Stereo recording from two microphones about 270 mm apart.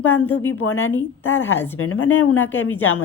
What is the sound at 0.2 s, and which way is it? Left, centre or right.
A woman's voice, left.